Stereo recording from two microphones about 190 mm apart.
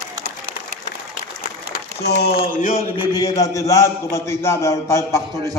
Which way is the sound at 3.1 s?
20° left (ahead or behind).